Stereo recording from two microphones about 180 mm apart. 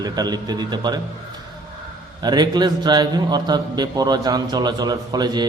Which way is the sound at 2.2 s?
25° right (ahead or behind).